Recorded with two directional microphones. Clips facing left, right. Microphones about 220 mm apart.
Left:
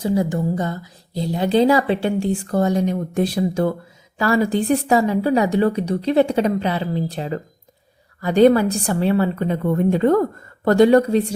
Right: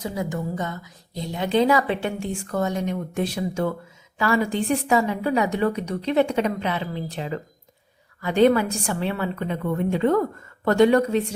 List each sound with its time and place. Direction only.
0.0 s a woman's voice: 30° left (ahead or behind)